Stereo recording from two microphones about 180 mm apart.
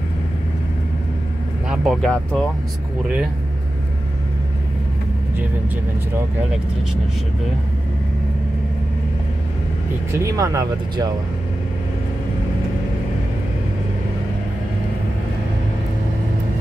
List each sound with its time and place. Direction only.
1.7 s speech: centre (ahead or behind)
10.1 s speech: 20° right (ahead or behind)